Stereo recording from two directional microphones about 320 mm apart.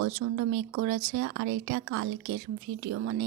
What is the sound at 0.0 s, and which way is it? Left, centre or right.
Speech, right.